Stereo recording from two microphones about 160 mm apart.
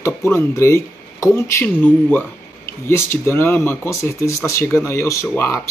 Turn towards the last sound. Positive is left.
turn(degrees=15)  # may be behind; listen again after turning